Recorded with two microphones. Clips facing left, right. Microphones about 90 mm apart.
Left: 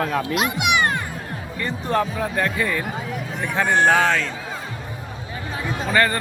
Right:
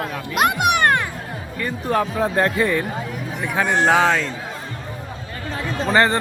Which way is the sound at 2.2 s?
25° right (ahead or behind).